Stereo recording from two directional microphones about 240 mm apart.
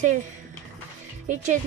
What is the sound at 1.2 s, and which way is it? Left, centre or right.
Speech, right.